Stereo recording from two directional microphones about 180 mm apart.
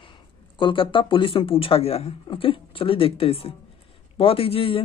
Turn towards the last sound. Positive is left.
turn(degrees=30)  # may be behind; listen again after turning